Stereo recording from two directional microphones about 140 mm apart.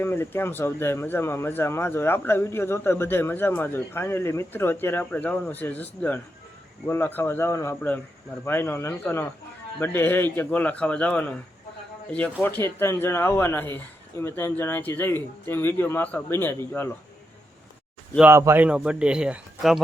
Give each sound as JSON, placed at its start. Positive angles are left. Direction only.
{"t": 0.0, "sound": "speech", "side_deg": 15}
{"t": 18.2, "sound": "a man's voice", "side_deg": -20}